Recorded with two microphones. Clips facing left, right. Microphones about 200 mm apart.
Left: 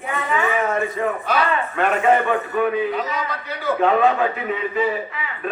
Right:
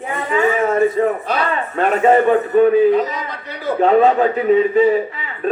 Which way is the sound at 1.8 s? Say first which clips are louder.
Right 5 dB; 40° right (ahead or behind).